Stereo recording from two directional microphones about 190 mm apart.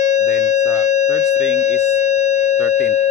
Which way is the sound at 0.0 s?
40° left (ahead or behind).